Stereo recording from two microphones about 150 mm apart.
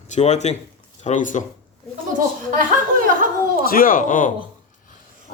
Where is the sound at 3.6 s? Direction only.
70° left (ahead or behind).